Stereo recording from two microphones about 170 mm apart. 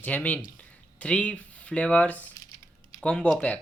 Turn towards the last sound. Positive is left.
turn(degrees=5)  # may be behind; listen again after turning